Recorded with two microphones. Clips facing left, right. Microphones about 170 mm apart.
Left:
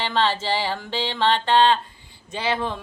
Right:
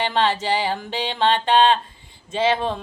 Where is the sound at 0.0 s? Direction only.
15° right (ahead or behind).